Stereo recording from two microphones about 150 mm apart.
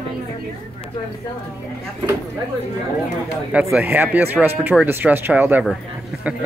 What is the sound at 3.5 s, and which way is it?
Speech, 5° right (ahead or behind).